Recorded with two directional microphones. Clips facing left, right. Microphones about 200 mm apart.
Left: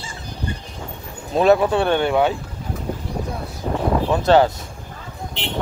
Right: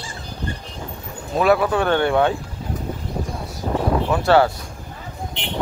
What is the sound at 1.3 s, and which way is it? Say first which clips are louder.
Speech: left 2 dB; 25° left (ahead or behind).